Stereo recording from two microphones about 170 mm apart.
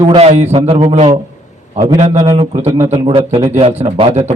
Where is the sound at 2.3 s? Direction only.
35° right (ahead or behind).